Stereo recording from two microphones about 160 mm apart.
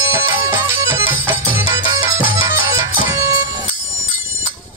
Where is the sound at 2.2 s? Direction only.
60° left (ahead or behind).